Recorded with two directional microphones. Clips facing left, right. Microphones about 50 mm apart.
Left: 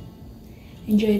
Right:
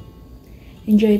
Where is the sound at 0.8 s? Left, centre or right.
Right.